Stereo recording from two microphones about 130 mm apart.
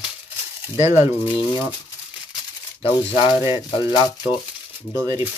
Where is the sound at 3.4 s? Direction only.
25° right (ahead or behind).